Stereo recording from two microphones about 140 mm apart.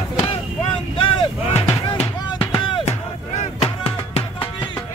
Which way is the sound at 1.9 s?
40° left (ahead or behind).